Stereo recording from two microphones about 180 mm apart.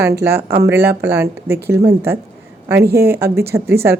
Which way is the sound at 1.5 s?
65° right (ahead or behind).